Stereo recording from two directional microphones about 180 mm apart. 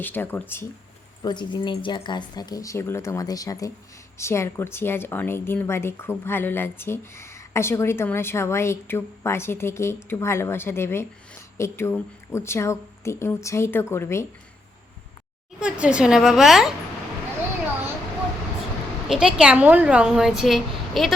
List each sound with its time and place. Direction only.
0.0 s speech: 10° left (ahead or behind)
1.2 s speech: 25° left (ahead or behind)
15.6 s a woman's voice: 5° right (ahead or behind)
19.0 s a woman's voice: 5° right (ahead or behind)